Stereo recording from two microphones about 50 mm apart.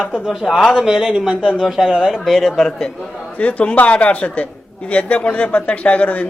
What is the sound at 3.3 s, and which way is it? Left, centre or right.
Speech, left.